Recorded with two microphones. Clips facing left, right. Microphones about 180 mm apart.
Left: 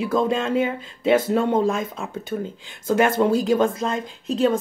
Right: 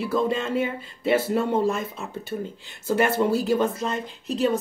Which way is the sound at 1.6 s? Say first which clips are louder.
Left 2 dB; 90° left.